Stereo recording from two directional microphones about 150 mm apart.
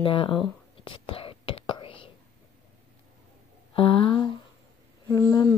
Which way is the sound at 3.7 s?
35° left (ahead or behind).